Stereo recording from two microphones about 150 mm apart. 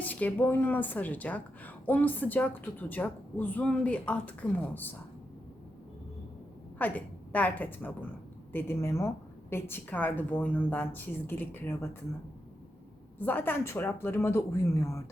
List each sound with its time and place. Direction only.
0.0 s a woman's voice: 10° left (ahead or behind)
6.7 s a woman's voice: 10° left (ahead or behind)
13.1 s a woman's voice: 10° left (ahead or behind)